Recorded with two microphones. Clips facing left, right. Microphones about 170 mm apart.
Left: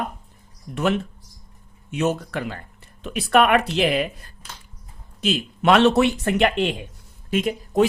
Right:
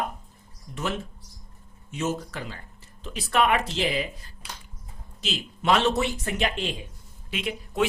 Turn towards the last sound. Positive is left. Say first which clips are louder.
# left 7 dB
turn(degrees=40)  # may be behind; listen again after turning